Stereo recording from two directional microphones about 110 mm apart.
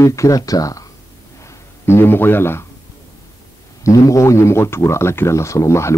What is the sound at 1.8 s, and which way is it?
Speech, 20° left (ahead or behind).